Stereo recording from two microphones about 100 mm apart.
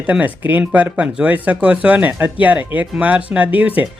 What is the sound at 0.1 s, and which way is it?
Speech, 15° right (ahead or behind).